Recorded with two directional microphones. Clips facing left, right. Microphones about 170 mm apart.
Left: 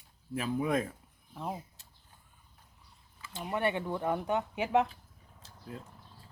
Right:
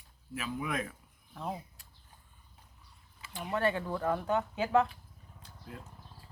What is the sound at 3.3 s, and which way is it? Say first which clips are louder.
Speech: even; 20° left (ahead or behind).